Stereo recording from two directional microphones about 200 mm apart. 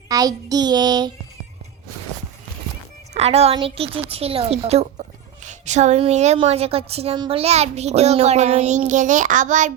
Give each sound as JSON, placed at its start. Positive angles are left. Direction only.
{"t": 0.1, "sound": "child singing", "side_deg": -20}
{"t": 3.2, "sound": "a woman's voice", "side_deg": -30}